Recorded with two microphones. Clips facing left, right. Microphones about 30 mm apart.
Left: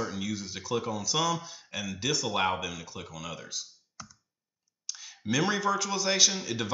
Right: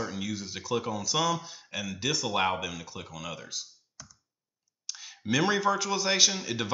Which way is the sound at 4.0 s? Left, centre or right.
Centre.